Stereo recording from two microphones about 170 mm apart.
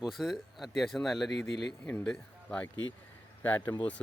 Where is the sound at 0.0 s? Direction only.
Centre (ahead or behind).